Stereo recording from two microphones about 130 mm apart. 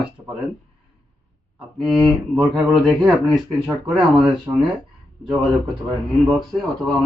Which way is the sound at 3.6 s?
5° right (ahead or behind).